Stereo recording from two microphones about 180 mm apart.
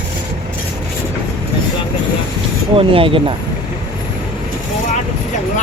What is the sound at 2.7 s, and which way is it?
Speech, 30° right (ahead or behind).